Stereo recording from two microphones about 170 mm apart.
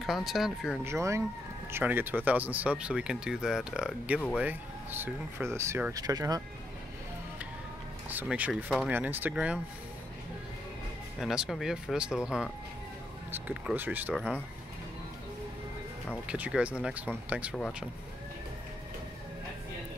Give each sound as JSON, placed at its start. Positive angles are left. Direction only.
{"t": 0.0, "sound": "speech", "side_deg": 0}
{"t": 0.8, "sound": "speech", "side_deg": -15}
{"t": 8.1, "sound": "speech", "side_deg": -10}
{"t": 11.1, "sound": "speech", "side_deg": -5}
{"t": 16.3, "sound": "speech", "side_deg": -5}